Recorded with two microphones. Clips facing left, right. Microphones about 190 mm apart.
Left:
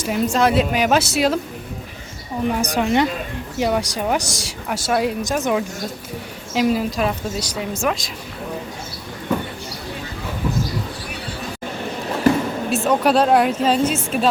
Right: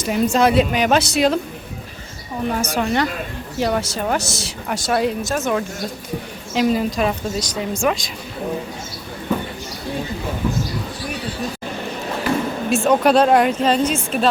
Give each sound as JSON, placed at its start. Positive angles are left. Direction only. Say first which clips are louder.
{"t": 0.0, "sound": "speech", "louder": "right 2 dB", "side_deg": 0}
{"t": 2.5, "sound": "a woman's voice", "louder": "left 1 dB", "side_deg": 15}
{"t": 5.2, "sound": "a woman's voice", "louder": "left 1 dB", "side_deg": 15}
{"t": 12.7, "sound": "speech", "louder": "right 2 dB", "side_deg": 0}